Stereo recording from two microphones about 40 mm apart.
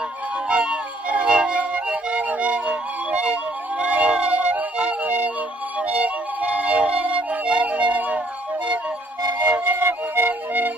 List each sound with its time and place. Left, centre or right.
0.5 s music: right
5.8 s flute: right
9.4 s music: right
9.8 s flute: right